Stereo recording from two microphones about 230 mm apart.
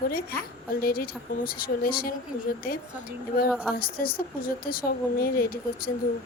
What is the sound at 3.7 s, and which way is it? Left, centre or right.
A woman's voice, left.